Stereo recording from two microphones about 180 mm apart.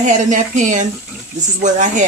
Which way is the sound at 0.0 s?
45° right (ahead or behind).